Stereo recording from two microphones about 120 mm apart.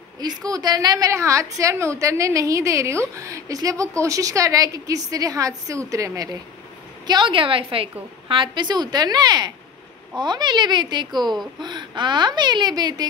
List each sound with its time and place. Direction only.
0.2 s a woman's voice: 35° right (ahead or behind)
7.1 s a woman's voice: 40° right (ahead or behind)